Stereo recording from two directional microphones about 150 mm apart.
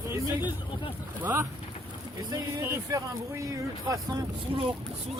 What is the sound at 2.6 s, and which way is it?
Speech, 20° right (ahead or behind).